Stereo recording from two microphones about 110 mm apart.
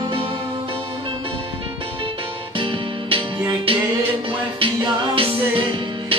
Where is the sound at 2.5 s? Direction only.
55° right (ahead or behind).